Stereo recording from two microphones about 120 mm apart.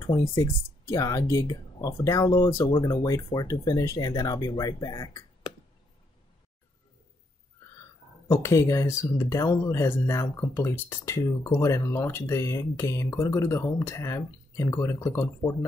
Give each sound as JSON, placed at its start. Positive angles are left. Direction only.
{"t": 0.4, "sound": "speech", "side_deg": 25}
{"t": 8.3, "sound": "speech", "side_deg": 25}